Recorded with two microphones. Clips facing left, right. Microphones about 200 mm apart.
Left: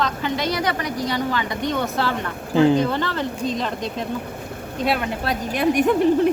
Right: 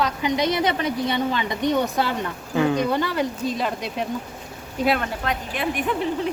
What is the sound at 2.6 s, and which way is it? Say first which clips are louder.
Speech: left 5 dB; 30° left (ahead or behind).